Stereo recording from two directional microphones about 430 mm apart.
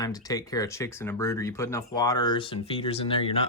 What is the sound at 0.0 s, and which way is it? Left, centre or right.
Speech, centre.